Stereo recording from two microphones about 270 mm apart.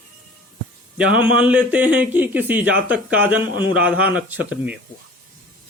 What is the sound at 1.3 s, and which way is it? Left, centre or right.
Speech, centre.